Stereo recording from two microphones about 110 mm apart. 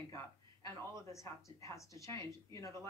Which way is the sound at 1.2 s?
30° left (ahead or behind).